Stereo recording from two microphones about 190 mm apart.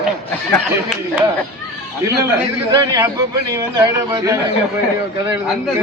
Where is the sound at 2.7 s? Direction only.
20° right (ahead or behind).